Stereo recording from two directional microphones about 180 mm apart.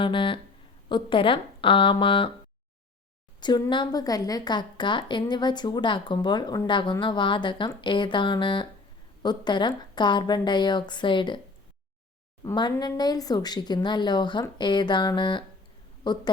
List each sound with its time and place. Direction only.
0.0 s a woman's voice: 30° left (ahead or behind)
3.4 s a woman's voice: 25° left (ahead or behind)
12.4 s a woman's voice: 25° left (ahead or behind)